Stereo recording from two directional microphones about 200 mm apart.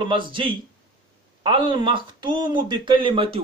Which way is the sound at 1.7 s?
25° right (ahead or behind).